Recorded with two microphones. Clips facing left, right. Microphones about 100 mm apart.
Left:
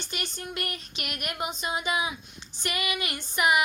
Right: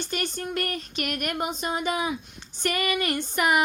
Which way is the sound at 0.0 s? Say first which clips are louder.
Right 6 dB; 50° right (ahead or behind).